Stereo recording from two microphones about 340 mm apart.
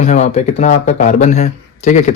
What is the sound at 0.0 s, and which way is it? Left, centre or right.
Speech, left.